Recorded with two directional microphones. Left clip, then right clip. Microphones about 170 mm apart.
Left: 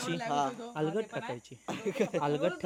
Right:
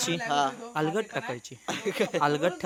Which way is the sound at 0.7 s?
15° right (ahead or behind).